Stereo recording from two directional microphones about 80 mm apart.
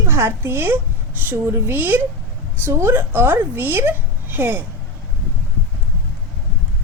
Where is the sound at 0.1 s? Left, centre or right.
Right.